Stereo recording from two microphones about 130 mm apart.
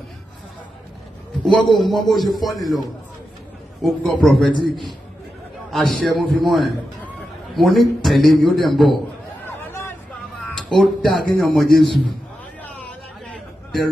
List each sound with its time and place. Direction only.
1.5 s a man's voice: centre (ahead or behind)
3.8 s a man's voice: centre (ahead or behind)
4.5 s a man's voice: 35° left (ahead or behind)
5.7 s a man's voice: centre (ahead or behind)
9.5 s hubbub: 15° left (ahead or behind)
10.5 s speech: 5° left (ahead or behind)
12.6 s a sound: 10° left (ahead or behind)